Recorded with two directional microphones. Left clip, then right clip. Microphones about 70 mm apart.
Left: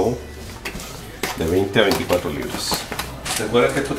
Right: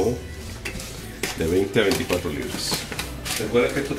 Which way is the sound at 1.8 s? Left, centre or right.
Centre.